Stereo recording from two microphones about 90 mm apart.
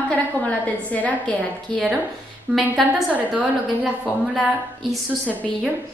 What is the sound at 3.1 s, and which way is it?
Speech, 15° right (ahead or behind).